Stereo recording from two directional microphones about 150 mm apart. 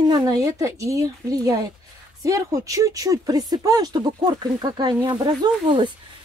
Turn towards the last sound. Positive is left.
turn(degrees=-30)  # may be behind; listen again after turning